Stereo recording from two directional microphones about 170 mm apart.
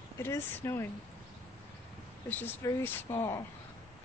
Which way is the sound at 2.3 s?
15° left (ahead or behind).